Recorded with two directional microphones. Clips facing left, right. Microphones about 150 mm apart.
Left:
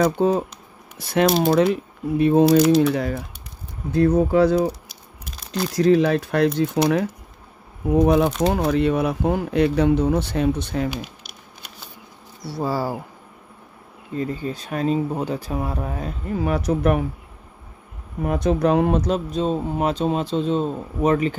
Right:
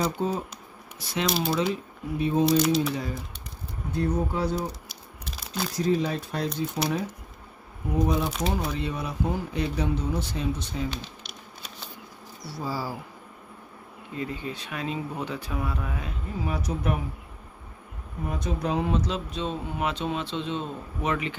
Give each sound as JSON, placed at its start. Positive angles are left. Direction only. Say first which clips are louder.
{"t": 0.0, "sound": "speech", "louder": "left 9 dB", "side_deg": 70}
{"t": 0.9, "sound": "speech", "louder": "left 9 dB", "side_deg": 55}
{"t": 2.4, "sound": "speech", "louder": "left 6 dB", "side_deg": 0}
{"t": 2.9, "sound": "speech", "louder": "left 8 dB", "side_deg": 65}
{"t": 3.9, "sound": "speech", "louder": "left 10 dB", "side_deg": 90}
{"t": 4.8, "sound": "a sound", "louder": "even", "side_deg": 0}
{"t": 5.8, "sound": "speech", "louder": "left 9 dB", "side_deg": 80}
{"t": 8.0, "sound": "speech", "louder": "left 8 dB", "side_deg": 65}
{"t": 12.4, "sound": "speech", "louder": "left 8 dB", "side_deg": 65}
{"t": 14.1, "sound": "speech", "louder": "left 7 dB", "side_deg": 40}
{"t": 16.3, "sound": "speech", "louder": "left 9 dB", "side_deg": 65}
{"t": 18.2, "sound": "speech", "louder": "left 10 dB", "side_deg": 70}